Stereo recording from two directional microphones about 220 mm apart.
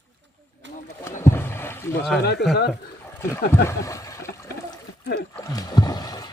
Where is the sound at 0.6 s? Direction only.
55° right (ahead or behind).